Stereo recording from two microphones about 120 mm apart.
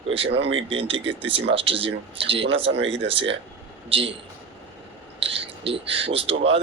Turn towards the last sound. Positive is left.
turn(degrees=-50)  # may be behind; listen again after turning